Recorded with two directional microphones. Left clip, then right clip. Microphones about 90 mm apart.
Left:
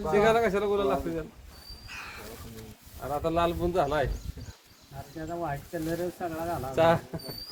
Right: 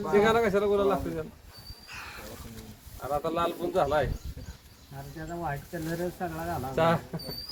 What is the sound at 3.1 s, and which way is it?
Speech, 45° left (ahead or behind).